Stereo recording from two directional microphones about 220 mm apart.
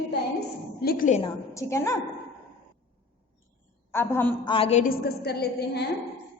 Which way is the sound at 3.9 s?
10° left (ahead or behind).